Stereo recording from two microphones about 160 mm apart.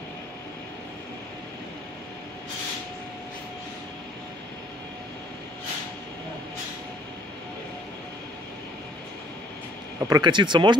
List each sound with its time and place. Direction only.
9.9 s speech: 20° right (ahead or behind)